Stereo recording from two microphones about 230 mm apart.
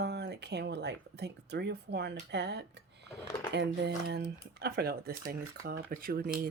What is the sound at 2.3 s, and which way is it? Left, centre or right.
Speech, right.